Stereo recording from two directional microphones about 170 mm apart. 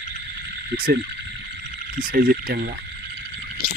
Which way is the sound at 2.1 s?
60° right (ahead or behind).